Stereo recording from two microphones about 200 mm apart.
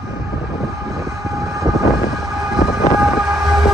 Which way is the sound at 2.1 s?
Centre (ahead or behind).